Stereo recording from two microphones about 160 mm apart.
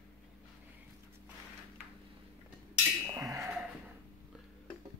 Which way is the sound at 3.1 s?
20° right (ahead or behind).